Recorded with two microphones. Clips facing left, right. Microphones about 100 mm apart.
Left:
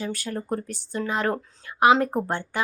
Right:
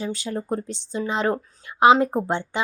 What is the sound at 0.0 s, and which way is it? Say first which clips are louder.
A woman's voice: right 2 dB; 20° right (ahead or behind).